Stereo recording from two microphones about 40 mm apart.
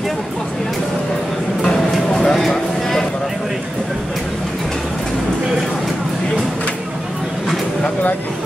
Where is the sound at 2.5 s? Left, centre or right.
Centre.